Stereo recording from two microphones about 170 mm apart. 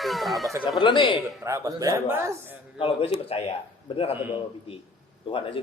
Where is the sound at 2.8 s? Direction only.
35° left (ahead or behind).